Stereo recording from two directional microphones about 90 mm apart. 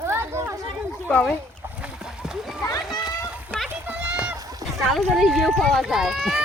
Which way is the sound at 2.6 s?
50° left (ahead or behind).